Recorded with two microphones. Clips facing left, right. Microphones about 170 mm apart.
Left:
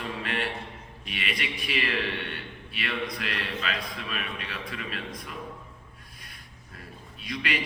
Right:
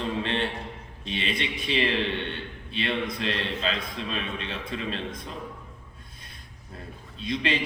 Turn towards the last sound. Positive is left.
turn(degrees=-25)  # may be behind; listen again after turning